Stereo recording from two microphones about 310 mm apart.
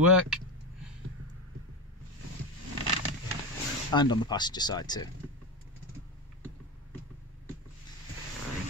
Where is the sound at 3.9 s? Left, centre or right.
Centre.